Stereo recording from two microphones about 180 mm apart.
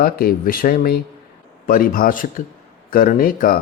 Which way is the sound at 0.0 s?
55° left (ahead or behind).